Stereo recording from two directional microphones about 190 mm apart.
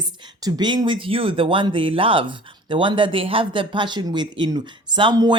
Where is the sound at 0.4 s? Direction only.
20° right (ahead or behind).